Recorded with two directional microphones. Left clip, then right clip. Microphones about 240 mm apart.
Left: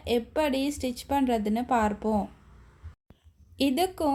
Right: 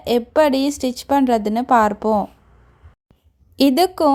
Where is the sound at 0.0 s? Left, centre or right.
Right.